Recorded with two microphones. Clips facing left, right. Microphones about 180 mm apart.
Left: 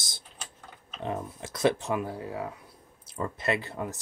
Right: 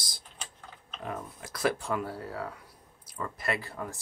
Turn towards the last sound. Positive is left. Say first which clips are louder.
# left 4 dB
turn(degrees=20)  # may be behind; listen again after turning